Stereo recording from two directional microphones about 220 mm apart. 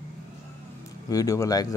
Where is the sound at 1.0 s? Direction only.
15° left (ahead or behind).